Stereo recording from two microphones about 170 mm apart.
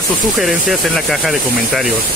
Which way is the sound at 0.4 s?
Centre (ahead or behind).